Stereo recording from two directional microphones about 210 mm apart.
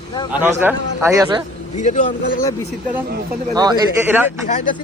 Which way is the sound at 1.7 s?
35° left (ahead or behind).